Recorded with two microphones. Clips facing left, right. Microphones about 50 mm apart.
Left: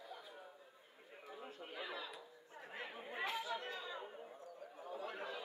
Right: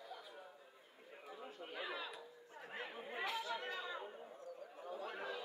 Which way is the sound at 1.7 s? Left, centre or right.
Centre.